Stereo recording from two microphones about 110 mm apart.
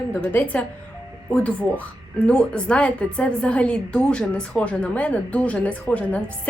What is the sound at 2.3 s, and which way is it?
A woman's voice, 10° left (ahead or behind).